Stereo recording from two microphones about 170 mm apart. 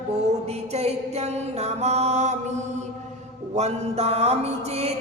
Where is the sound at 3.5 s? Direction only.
40° right (ahead or behind).